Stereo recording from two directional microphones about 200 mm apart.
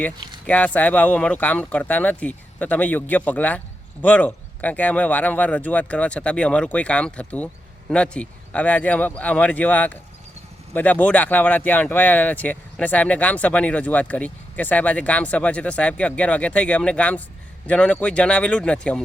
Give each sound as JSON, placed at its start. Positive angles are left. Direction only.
{"t": 0.4, "sound": "speech", "side_deg": 5}